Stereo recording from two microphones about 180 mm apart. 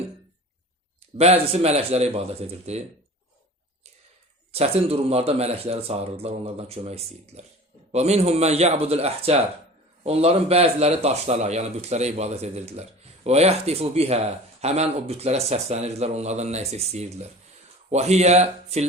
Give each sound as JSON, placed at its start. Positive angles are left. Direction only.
{"t": 1.1, "sound": "speech", "side_deg": -35}
{"t": 4.5, "sound": "speech", "side_deg": -35}